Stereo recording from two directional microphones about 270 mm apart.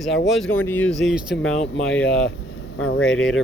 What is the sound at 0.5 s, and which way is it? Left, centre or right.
Speech, centre.